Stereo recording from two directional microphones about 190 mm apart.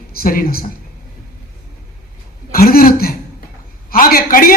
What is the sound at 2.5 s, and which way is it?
Speech, 50° left (ahead or behind).